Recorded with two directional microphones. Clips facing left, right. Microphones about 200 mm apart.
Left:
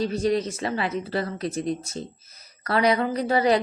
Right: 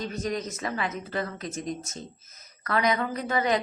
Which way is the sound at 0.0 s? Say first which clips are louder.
Left 7 dB; 30° left (ahead or behind).